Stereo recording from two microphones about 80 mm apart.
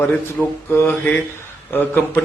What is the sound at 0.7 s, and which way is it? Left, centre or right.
Speech, left.